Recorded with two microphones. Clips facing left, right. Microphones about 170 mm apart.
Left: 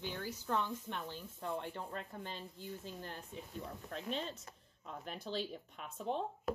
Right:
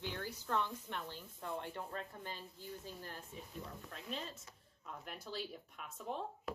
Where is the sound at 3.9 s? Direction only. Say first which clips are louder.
Left 6 dB; 30° left (ahead or behind).